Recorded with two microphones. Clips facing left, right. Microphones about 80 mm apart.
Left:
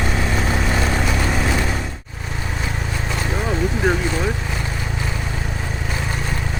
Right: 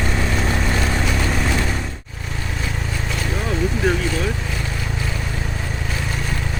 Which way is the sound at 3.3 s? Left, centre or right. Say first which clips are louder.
Even; centre.